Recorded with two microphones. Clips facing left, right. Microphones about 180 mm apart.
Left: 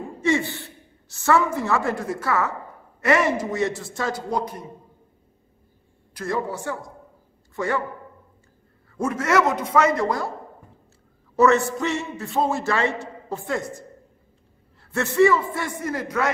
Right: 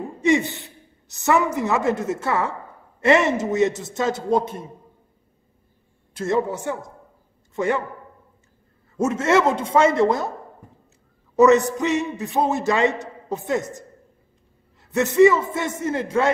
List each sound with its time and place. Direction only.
0.2 s a woman's voice: 20° right (ahead or behind)
6.1 s a man's voice: 25° right (ahead or behind)
8.9 s a man's voice: 25° right (ahead or behind)
11.3 s a man's voice: 15° right (ahead or behind)